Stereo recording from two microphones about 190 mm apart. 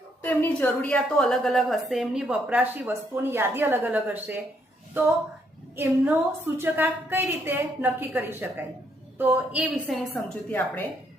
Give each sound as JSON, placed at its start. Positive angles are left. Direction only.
{"t": 0.2, "sound": "a woman's voice", "side_deg": 10}
{"t": 5.7, "sound": "a woman's voice", "side_deg": -10}